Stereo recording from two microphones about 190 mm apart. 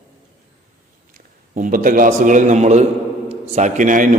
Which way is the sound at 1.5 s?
45° right (ahead or behind).